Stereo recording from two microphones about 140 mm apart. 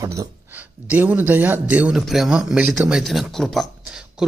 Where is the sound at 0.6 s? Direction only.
10° right (ahead or behind).